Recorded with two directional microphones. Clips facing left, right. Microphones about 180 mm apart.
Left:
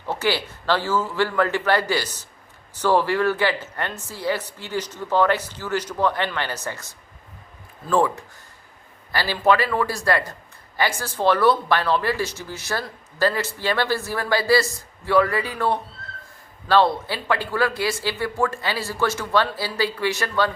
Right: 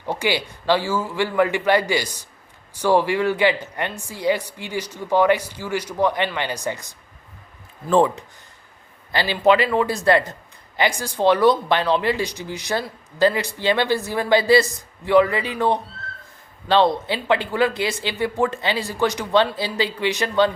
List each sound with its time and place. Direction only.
0.0 s speech: 15° right (ahead or behind)